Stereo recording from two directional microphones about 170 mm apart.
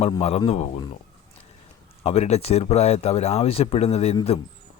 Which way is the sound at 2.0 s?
35° left (ahead or behind).